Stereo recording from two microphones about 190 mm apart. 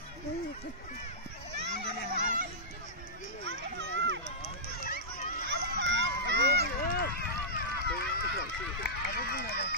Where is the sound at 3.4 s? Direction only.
70° right (ahead or behind).